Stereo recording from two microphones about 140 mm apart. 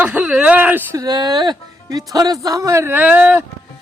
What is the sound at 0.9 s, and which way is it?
Speech, 30° right (ahead or behind).